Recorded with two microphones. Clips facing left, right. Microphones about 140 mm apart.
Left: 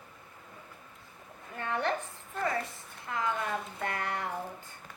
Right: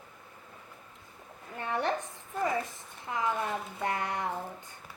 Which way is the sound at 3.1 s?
20° right (ahead or behind).